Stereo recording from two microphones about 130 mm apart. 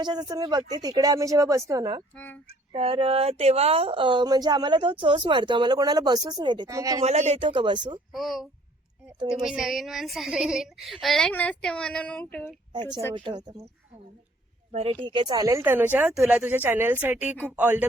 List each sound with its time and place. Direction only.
0.0 s speech: 35° right (ahead or behind)
2.1 s speech: 10° left (ahead or behind)
2.5 s speech: 50° right (ahead or behind)
6.7 s speech: 25° right (ahead or behind)
7.0 s speech: 55° right (ahead or behind)
7.4 s speech: 40° right (ahead or behind)
8.1 s a woman's voice: centre (ahead or behind)
13.1 s speech: 35° right (ahead or behind)
14.7 s speech: 50° right (ahead or behind)
14.9 s speech: 40° right (ahead or behind)
15.5 s speech: 15° right (ahead or behind)